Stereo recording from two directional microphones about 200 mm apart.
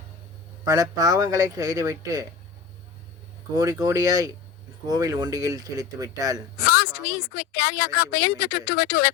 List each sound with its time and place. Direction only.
0.6 s speech: 15° right (ahead or behind)
3.5 s speech: 15° right (ahead or behind)
6.7 s speech: 50° left (ahead or behind)